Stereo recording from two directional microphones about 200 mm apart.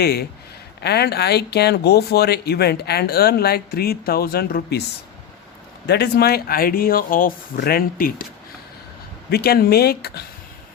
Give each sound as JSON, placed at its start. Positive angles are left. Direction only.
{"t": 0.0, "sound": "speech", "side_deg": 50}
{"t": 5.8, "sound": "speech", "side_deg": 55}
{"t": 9.3, "sound": "speech", "side_deg": 50}